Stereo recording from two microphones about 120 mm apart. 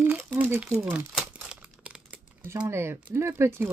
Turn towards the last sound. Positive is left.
turn(degrees=-20)  # may be behind; listen again after turning